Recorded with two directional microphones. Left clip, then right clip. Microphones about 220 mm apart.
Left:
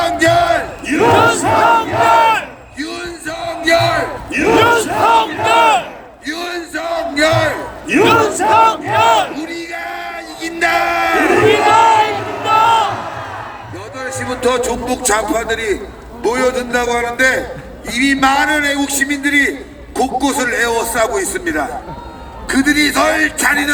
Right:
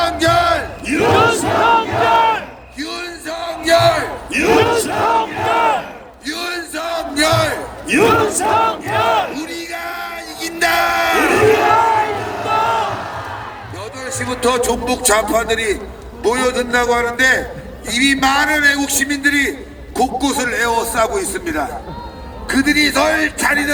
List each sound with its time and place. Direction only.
0.0 s battle cry: 10° left (ahead or behind)
1.1 s battle cry: 25° left (ahead or behind)
2.7 s a sound: 5° right (ahead or behind)
3.2 s battle cry: 25° right (ahead or behind)
4.6 s battle cry: 35° left (ahead or behind)
6.2 s battle cry: 40° right (ahead or behind)
8.0 s battle cry: 50° left (ahead or behind)
9.3 s a sound: 50° right (ahead or behind)
11.7 s crowd: 45° left (ahead or behind)
14.3 s music: 35° right (ahead or behind)
15.3 s a man's voice: 15° right (ahead or behind); by 19.5 s 10° left (ahead or behind)
20.0 s a man's voice: centre (ahead or behind)
20.4 s a man's voice: 15° left (ahead or behind)
22.4 s a man's voice: 25° left (ahead or behind)